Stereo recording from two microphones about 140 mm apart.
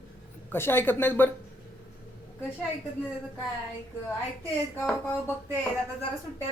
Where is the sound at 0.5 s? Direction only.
15° left (ahead or behind).